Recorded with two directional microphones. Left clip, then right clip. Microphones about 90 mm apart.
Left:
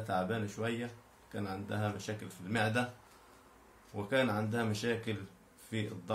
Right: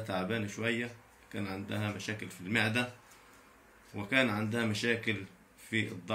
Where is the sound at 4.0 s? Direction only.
25° left (ahead or behind).